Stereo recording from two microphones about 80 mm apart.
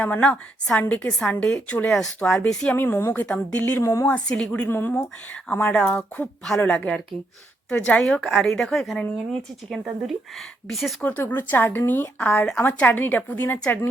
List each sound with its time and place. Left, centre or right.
0.0 s a woman's voice: centre
2.7 s speech: left
3.8 s speech: left
4.0 s a woman's voice: centre
4.6 s a woman's voice: left
8.0 s speech: centre
11.3 s speech: left